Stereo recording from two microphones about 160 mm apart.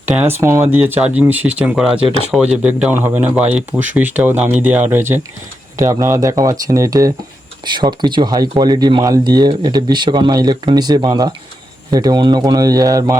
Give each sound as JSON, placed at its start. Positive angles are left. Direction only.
{"t": 0.1, "sound": "speech", "side_deg": -10}